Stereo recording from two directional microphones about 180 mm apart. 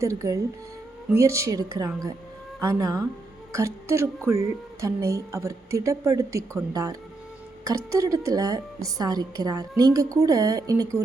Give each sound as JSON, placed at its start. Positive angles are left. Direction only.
{"t": 0.0, "sound": "a woman's voice", "side_deg": -15}